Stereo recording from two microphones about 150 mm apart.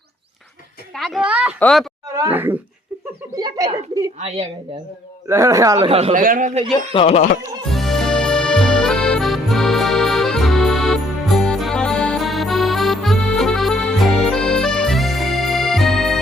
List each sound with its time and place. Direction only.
0.9 s a sound: centre (ahead or behind)
1.5 s speech: 5° left (ahead or behind)
2.3 s speech: 15° right (ahead or behind)
3.3 s a sound: 25° right (ahead or behind)
4.2 s a woman's voice: 45° right (ahead or behind)
5.3 s speech: 20° right (ahead or behind)
5.8 s speech: 40° right (ahead or behind)
6.1 s a man's voice: 60° right (ahead or behind)
6.9 s speech: 40° left (ahead or behind)
7.7 s music: centre (ahead or behind)